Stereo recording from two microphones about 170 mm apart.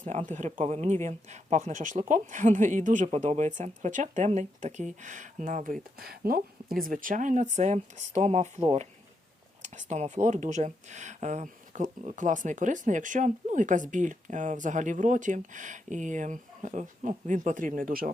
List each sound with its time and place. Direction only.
0.3 s a woman's voice: 45° right (ahead or behind)
9.6 s speech: 45° right (ahead or behind)